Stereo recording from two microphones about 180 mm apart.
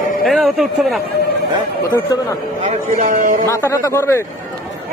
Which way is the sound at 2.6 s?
45° right (ahead or behind).